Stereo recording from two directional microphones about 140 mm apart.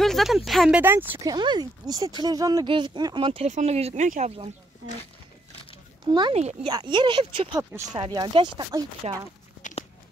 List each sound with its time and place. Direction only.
0.0 s a sound: centre (ahead or behind)
0.5 s speech: 5° right (ahead or behind)
1.3 s speech: 30° right (ahead or behind)
3.4 s speech: 55° right (ahead or behind)
6.3 s speech: 50° right (ahead or behind)
6.7 s speech: 35° right (ahead or behind)
9.0 s speech: 45° right (ahead or behind)
9.6 s a sound: 65° left (ahead or behind)